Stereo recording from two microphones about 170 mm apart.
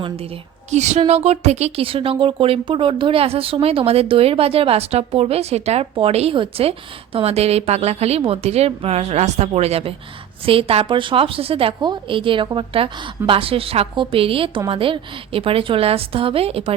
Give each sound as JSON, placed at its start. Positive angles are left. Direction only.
{"t": 0.7, "sound": "a woman's voice", "side_deg": -40}